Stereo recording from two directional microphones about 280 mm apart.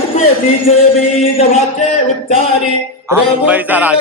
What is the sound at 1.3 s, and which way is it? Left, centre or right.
Speech, left.